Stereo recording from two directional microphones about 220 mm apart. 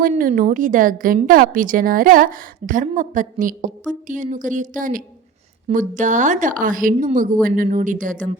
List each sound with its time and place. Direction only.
0.0 s a woman's voice: 40° right (ahead or behind)